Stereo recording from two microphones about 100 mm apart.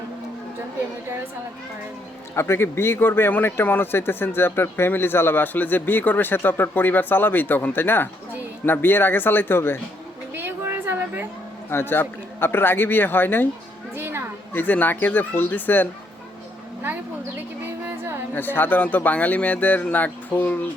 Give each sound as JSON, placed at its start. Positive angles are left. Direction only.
{"t": 2.3, "sound": "speech", "side_deg": 25}
{"t": 10.3, "sound": "a sound", "side_deg": -20}
{"t": 11.7, "sound": "speech", "side_deg": 25}
{"t": 13.9, "sound": "a sound", "side_deg": -25}
{"t": 14.5, "sound": "speech", "side_deg": 15}
{"t": 17.7, "sound": "music", "side_deg": -25}
{"t": 18.3, "sound": "speech", "side_deg": 20}